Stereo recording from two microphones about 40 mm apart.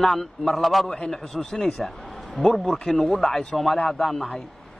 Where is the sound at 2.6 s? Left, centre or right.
Centre.